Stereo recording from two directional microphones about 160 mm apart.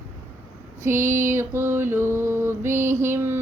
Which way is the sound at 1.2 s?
15° right (ahead or behind).